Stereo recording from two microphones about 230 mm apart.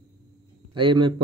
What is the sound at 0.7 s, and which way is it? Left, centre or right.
Speech, right.